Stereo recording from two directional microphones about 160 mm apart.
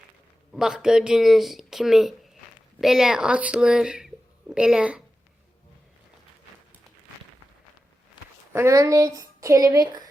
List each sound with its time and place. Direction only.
0.5 s speech: 5° right (ahead or behind)
8.5 s a woman's voice: 20° right (ahead or behind)